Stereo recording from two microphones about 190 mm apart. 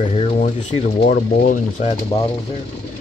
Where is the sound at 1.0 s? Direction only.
50° left (ahead or behind).